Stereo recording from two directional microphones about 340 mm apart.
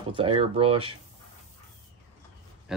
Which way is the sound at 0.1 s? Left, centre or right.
Centre.